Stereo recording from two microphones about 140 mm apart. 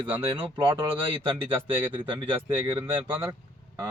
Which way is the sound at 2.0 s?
35° right (ahead or behind).